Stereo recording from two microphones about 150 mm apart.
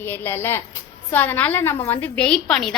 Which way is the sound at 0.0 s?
15° left (ahead or behind).